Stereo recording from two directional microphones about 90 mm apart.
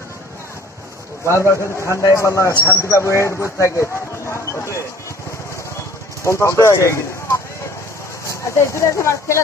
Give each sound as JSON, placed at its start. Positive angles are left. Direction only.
{"t": 1.3, "sound": "a man's voice", "side_deg": 35}
{"t": 6.2, "sound": "a man's voice", "side_deg": 35}